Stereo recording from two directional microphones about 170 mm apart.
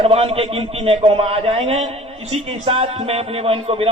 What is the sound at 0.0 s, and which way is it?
A man's voice, 35° right (ahead or behind).